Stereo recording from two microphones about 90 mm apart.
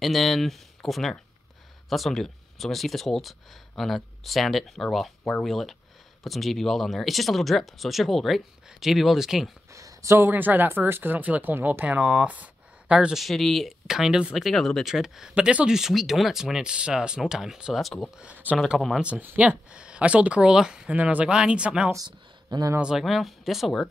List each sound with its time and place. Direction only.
0.0 s speech: centre (ahead or behind)
9.7 s speech: 35° right (ahead or behind); by 13.2 s 10° right (ahead or behind)
13.2 s speech: centre (ahead or behind)
18.1 s speech: 15° right (ahead or behind)
21.9 s speech: 45° right (ahead or behind)
22.8 s speech: 5° right (ahead or behind)